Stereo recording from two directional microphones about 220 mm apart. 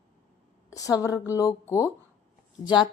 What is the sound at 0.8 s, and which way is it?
Speech, 15° left (ahead or behind).